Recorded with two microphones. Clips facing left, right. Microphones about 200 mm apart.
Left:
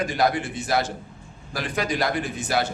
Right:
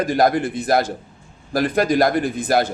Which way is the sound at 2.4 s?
55° right (ahead or behind).